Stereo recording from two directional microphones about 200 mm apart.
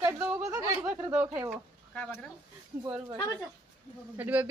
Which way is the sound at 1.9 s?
5° left (ahead or behind).